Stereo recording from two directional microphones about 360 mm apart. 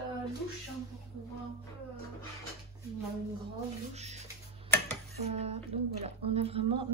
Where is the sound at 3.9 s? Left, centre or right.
Centre.